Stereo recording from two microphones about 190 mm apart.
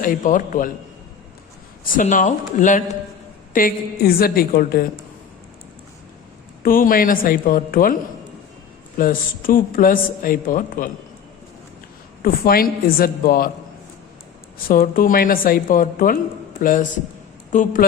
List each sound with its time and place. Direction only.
0.0 s a woman's voice: 45° left (ahead or behind)
1.8 s a woman's voice: 45° left (ahead or behind)
6.6 s a woman's voice: 50° left (ahead or behind)
9.0 s a woman's voice: 45° left (ahead or behind)
12.2 s a woman's voice: 50° left (ahead or behind)
14.7 s a woman's voice: 50° left (ahead or behind)